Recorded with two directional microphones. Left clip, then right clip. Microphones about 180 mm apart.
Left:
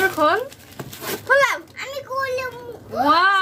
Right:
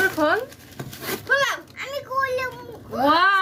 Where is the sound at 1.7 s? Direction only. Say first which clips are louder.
Right 1 dB; 20° left (ahead or behind).